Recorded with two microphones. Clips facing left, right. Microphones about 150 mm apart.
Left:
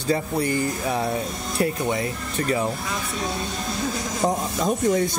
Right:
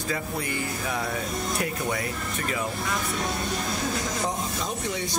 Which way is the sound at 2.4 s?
35° left (ahead or behind).